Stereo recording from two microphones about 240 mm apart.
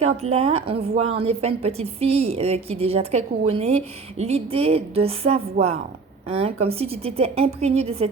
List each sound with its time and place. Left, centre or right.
0.0 s a woman's voice: right